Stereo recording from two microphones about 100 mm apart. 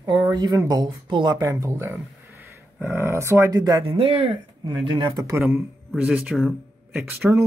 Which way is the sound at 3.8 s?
75° right (ahead or behind).